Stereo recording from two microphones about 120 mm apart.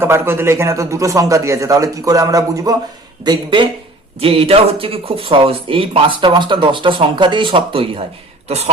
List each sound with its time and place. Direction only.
0.0 s a man's voice: 20° right (ahead or behind)
3.2 s speech: 40° right (ahead or behind)
4.2 s speech: 55° right (ahead or behind)
8.4 s speech: 60° right (ahead or behind)